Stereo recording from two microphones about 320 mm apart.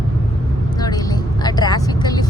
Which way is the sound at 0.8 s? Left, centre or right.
Centre.